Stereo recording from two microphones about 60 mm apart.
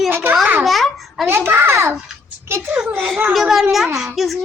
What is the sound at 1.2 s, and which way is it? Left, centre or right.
A woman's voice, right.